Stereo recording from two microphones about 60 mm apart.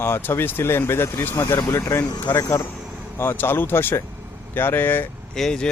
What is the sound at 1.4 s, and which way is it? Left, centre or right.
Speech, left.